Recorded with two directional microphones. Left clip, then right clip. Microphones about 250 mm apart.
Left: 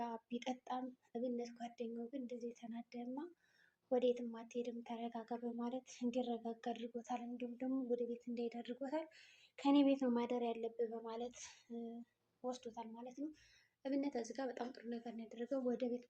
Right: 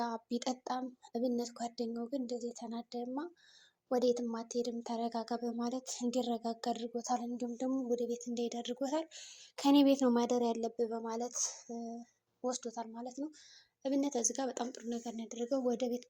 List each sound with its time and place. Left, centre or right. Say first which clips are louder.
0.0 s speech: right 8 dB; right